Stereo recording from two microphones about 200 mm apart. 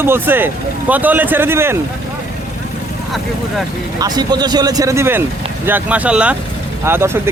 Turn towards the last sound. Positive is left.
turn(degrees=-10)  # may be behind; listen again after turning